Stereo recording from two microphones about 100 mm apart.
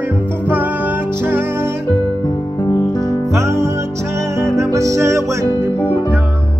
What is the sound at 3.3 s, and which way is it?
Music, 30° right (ahead or behind).